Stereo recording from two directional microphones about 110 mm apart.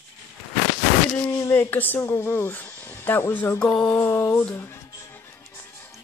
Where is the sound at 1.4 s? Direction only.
20° left (ahead or behind).